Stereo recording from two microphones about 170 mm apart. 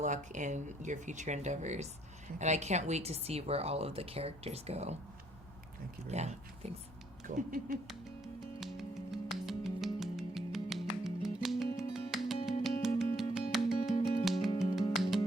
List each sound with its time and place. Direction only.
0.0 s a woman's voice: 45° right (ahead or behind)
6.1 s a woman's voice: 40° right (ahead or behind)
8.6 s music: centre (ahead or behind)